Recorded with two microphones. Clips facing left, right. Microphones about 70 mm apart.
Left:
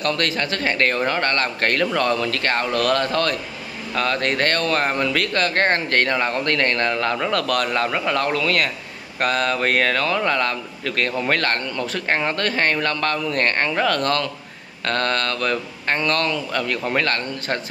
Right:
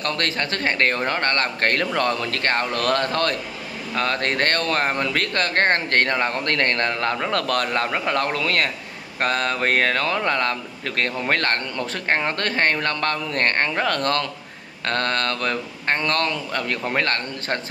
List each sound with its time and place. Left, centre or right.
0.0 s speech: right